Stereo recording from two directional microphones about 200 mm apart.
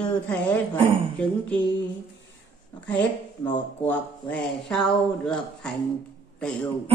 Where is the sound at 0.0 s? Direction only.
10° left (ahead or behind).